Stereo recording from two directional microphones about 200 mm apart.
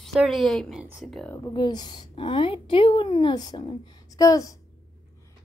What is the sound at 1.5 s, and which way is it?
A woman's voice, 20° left (ahead or behind).